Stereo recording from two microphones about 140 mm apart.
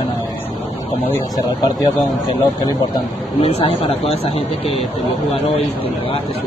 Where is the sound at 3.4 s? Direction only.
45° left (ahead or behind).